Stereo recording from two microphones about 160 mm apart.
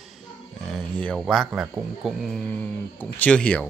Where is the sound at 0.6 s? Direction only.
5° left (ahead or behind).